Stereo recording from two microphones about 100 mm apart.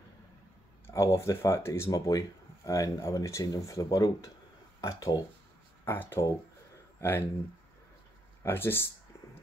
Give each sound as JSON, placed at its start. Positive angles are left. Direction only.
{"t": 0.8, "sound": "speech", "side_deg": 30}
{"t": 1.9, "sound": "speech", "side_deg": 40}
{"t": 5.9, "sound": "speech", "side_deg": 20}
{"t": 8.5, "sound": "speech", "side_deg": 25}